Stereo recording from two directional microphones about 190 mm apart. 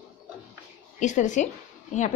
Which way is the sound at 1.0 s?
40° left (ahead or behind).